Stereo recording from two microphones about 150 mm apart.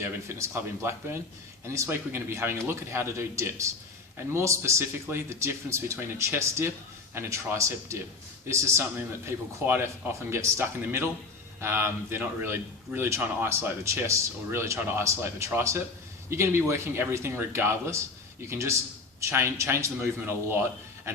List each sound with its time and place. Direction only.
0.0 s a man's voice: 15° right (ahead or behind)
10.2 s a man's voice: 15° right (ahead or behind)